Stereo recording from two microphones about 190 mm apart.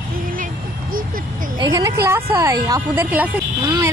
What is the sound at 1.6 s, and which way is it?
A woman's voice, 20° right (ahead or behind).